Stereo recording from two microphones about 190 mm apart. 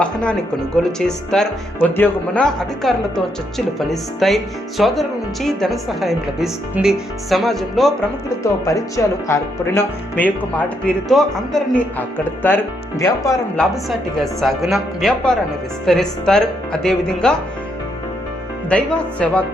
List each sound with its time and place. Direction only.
0.0 s speech: 5° left (ahead or behind)
8.6 s speech: 15° left (ahead or behind)
14.2 s speech: centre (ahead or behind)
18.7 s speech: 5° left (ahead or behind)